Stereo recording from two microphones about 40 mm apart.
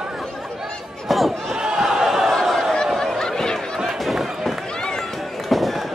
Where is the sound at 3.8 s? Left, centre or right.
Centre.